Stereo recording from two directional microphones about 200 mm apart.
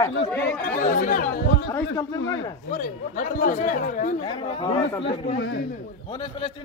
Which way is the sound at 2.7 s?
45° left (ahead or behind).